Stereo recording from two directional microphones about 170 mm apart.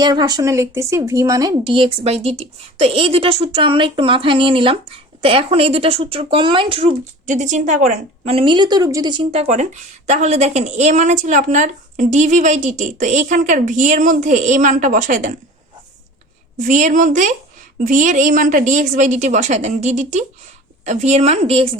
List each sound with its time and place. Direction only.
0.0 s a woman's voice: 25° right (ahead or behind)
7.3 s a woman's voice: 45° right (ahead or behind)
16.6 s a woman's voice: 50° right (ahead or behind)